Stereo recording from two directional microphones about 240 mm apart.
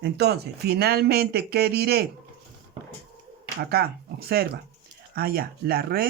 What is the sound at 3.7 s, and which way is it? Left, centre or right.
Speech, right.